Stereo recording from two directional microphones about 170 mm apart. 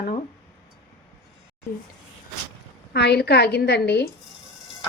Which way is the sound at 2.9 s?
75° left (ahead or behind).